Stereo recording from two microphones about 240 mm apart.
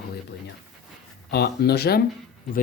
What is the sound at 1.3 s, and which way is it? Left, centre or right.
Speech, left.